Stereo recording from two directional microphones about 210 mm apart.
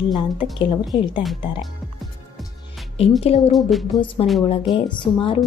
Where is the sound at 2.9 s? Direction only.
30° left (ahead or behind).